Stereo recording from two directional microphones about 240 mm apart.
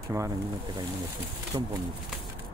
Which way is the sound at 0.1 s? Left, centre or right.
Centre.